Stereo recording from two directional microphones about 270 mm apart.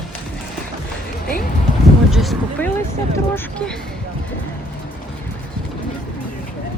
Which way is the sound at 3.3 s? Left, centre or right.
Centre.